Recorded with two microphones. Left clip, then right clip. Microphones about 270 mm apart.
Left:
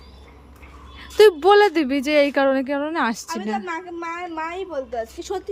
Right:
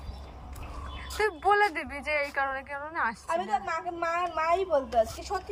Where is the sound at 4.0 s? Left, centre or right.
Centre.